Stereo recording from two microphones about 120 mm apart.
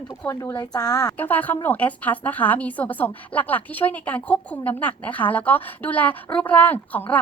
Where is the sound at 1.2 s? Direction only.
15° left (ahead or behind).